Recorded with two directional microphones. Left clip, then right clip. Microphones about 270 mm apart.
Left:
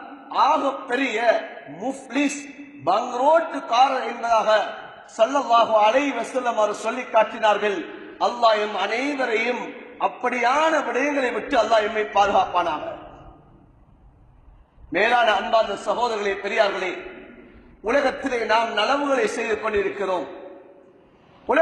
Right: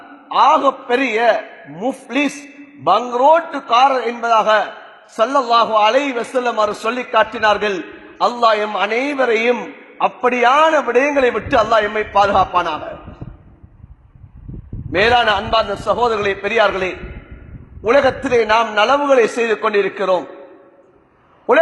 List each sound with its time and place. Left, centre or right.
0.3 s a man's voice: right
14.9 s a man's voice: right